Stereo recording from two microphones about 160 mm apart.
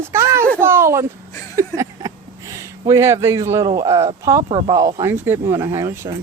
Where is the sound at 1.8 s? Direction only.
20° right (ahead or behind).